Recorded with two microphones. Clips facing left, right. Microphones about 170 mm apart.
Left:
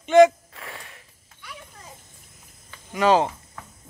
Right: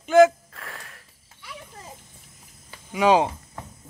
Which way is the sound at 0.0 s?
Centre (ahead or behind).